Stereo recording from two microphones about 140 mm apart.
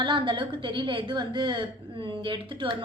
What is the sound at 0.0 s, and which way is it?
A woman's voice, 35° right (ahead or behind).